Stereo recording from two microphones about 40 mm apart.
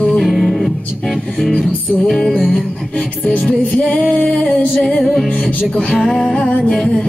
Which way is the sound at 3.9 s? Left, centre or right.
Left.